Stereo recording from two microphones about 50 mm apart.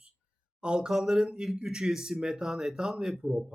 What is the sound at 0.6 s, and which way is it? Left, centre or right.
Speech, centre.